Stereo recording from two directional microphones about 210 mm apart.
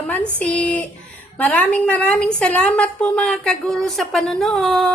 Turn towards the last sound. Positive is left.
turn(degrees=0)  # may be behind; listen again after turning